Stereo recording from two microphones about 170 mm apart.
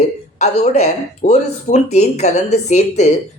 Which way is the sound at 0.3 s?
40° left (ahead or behind).